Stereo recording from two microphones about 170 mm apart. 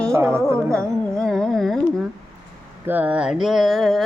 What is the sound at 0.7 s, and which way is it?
Carnatic music, 5° left (ahead or behind).